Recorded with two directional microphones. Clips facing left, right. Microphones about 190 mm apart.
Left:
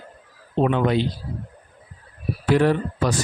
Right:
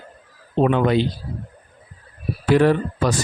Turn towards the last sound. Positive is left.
turn(degrees=-90)